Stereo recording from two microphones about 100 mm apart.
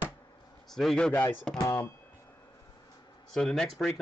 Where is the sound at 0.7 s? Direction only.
5° left (ahead or behind).